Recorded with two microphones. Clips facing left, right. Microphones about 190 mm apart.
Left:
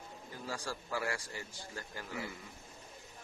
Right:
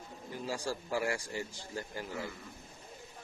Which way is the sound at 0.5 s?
20° right (ahead or behind).